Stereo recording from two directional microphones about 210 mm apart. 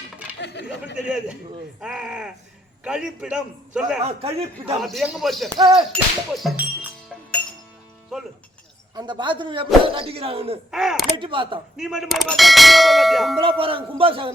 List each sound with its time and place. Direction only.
0.3 s chatter: 55° left (ahead or behind)
0.9 s clang: 5° right (ahead or behind)
4.0 s a man's voice: 30° right (ahead or behind)
4.8 s clang: centre (ahead or behind)
5.5 s a man's voice: 20° right (ahead or behind)
5.9 s ding: centre (ahead or behind)
9.0 s a man's voice: 20° right (ahead or behind)
10.7 s clang: centre (ahead or behind)
11.2 s a man's voice: 25° right (ahead or behind)
11.8 s clang: centre (ahead or behind)
13.4 s a man's voice: 25° right (ahead or behind)